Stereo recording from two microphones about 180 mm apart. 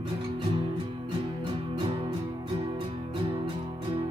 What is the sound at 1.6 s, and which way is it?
Music, 30° right (ahead or behind).